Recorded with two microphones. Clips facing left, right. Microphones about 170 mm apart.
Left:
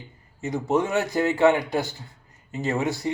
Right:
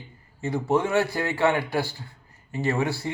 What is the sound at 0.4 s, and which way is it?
A man's voice, 20° left (ahead or behind).